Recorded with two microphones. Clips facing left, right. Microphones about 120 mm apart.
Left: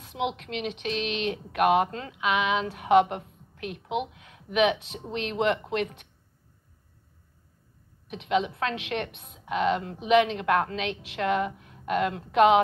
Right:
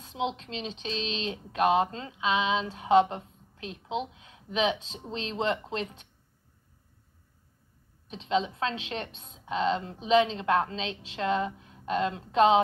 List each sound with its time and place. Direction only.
0.0 s a sound: 25° right (ahead or behind)
0.4 s a woman's voice: 25° right (ahead or behind)
8.1 s a woman's voice: 30° right (ahead or behind)